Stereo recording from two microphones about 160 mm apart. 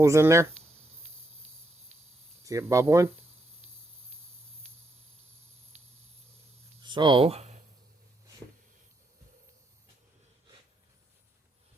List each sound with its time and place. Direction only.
0.0 s speech: 20° right (ahead or behind)
2.4 s speech: 20° right (ahead or behind)
6.8 s speech: 30° right (ahead or behind)